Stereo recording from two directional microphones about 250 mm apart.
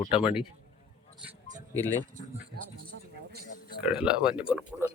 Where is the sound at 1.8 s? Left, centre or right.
Centre.